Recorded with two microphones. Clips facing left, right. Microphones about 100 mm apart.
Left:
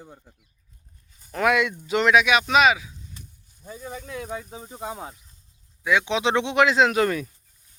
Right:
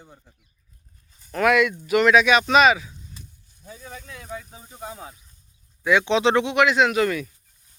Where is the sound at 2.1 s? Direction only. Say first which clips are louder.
Right 1 dB; 5° left (ahead or behind).